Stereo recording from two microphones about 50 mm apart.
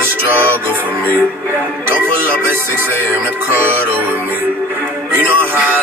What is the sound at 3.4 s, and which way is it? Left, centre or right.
Music, right.